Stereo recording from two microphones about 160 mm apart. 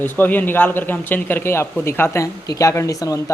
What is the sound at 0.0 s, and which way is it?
A man's voice, 10° left (ahead or behind).